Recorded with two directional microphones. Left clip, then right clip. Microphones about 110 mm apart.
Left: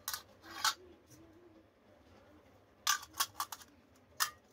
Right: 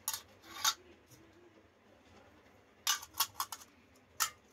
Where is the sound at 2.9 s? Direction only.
Centre (ahead or behind).